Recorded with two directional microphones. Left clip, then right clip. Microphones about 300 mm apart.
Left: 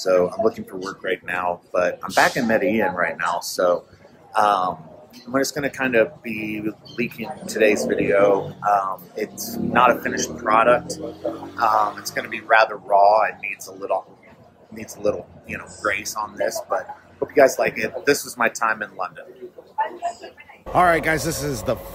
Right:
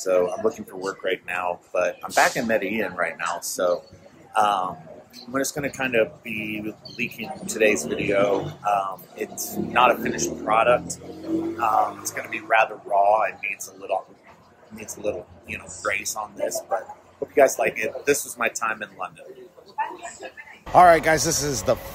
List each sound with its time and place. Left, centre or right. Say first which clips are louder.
0.0 s a man's voice: left 3 dB; centre
15.0 s speech: left 5 dB; centre
17.3 s speech: left 2 dB; centre
20.7 s speech: right 3 dB; centre